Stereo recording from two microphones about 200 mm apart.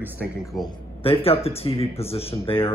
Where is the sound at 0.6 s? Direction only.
25° left (ahead or behind).